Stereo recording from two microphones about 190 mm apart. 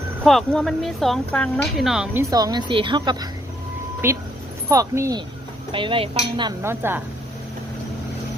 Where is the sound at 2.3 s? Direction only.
20° right (ahead or behind).